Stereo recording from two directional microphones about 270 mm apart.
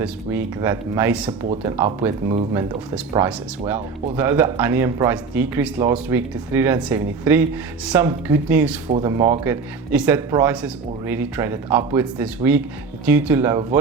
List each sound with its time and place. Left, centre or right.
0.0 s a man's voice: centre
2.0 s a man's voice: centre
3.8 s speech: right
4.2 s a man's voice: centre
8.9 s a man's voice: centre